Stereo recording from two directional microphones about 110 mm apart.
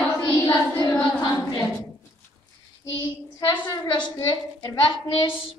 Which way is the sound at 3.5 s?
40° left (ahead or behind).